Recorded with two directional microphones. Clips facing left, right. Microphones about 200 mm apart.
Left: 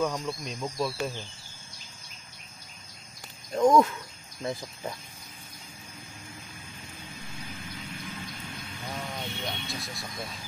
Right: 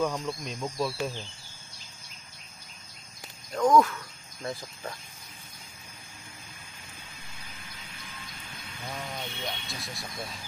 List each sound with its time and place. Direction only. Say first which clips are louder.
0.0 s speech: even; centre (ahead or behind)
3.5 s speech: left 1 dB; 20° left (ahead or behind)
8.8 s speech: left 1 dB; centre (ahead or behind)